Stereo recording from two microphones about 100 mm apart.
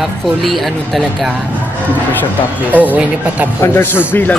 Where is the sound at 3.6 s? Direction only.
25° left (ahead or behind).